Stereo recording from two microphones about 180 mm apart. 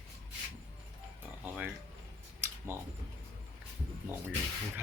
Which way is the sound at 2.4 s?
15° right (ahead or behind).